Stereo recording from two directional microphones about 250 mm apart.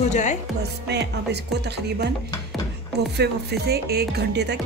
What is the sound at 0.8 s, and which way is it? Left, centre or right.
Speech, right.